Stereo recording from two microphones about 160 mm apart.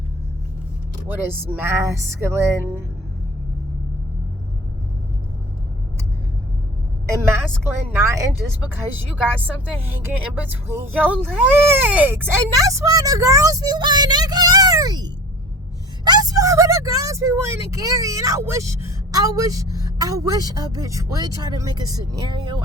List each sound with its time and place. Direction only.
1.0 s speech: 10° right (ahead or behind)
7.9 s speech: 15° right (ahead or behind)
9.8 s speech: 15° right (ahead or behind)